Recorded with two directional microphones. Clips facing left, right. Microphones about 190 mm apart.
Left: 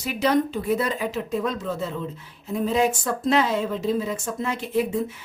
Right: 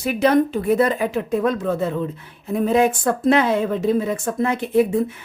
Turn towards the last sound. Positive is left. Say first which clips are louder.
# right 6 dB
turn(degrees=-55)  # may be behind; listen again after turning